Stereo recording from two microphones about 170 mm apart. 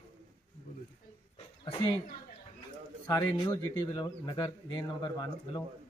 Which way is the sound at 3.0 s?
25° left (ahead or behind).